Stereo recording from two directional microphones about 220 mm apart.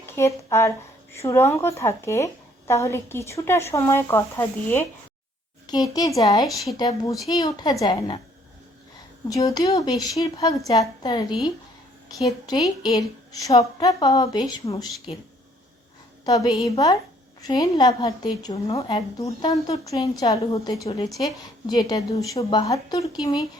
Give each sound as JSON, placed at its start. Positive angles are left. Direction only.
{"t": 0.0, "sound": "a woman's voice", "side_deg": 10}
{"t": 9.3, "sound": "a woman's voice", "side_deg": 15}